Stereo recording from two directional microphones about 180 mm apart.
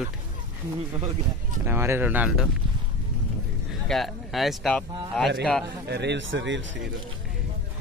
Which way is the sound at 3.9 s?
Centre (ahead or behind).